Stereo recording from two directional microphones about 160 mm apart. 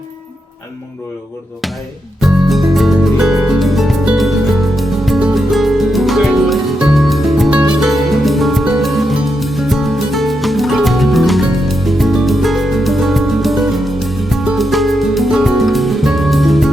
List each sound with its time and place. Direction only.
2.2 s music: centre (ahead or behind)